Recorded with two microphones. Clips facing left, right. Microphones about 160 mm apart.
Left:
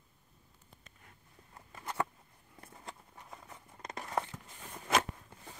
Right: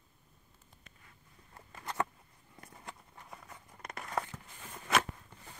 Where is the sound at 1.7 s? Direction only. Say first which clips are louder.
Even; 5° left (ahead or behind).